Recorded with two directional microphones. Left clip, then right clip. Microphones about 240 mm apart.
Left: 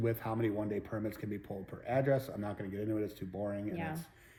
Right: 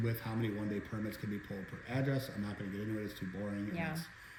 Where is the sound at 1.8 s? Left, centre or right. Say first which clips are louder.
Left 7 dB; centre.